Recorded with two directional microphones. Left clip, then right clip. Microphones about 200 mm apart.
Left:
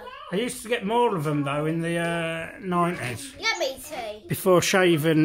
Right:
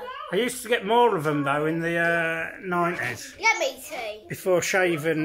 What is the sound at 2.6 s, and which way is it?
Speech, 20° left (ahead or behind).